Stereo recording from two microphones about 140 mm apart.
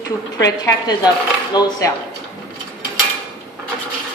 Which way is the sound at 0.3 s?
25° left (ahead or behind).